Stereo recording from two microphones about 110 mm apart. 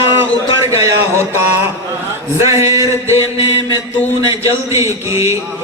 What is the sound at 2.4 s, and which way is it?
Speech, 25° right (ahead or behind).